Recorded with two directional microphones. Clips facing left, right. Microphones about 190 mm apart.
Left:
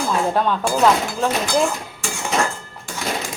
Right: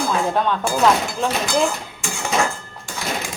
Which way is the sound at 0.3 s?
5° left (ahead or behind).